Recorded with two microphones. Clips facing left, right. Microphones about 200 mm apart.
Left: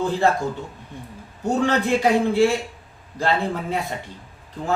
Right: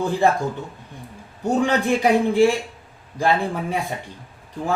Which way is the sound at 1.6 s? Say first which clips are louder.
Even; 15° right (ahead or behind).